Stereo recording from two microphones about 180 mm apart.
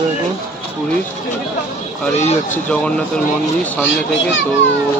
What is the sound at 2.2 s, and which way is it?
Speech, 40° left (ahead or behind).